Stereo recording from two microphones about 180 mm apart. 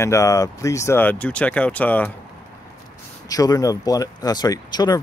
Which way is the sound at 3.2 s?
20° left (ahead or behind).